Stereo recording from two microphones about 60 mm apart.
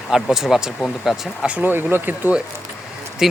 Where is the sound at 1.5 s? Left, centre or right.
Right.